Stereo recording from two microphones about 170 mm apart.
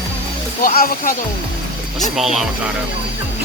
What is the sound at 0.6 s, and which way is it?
Speech, 60° left (ahead or behind).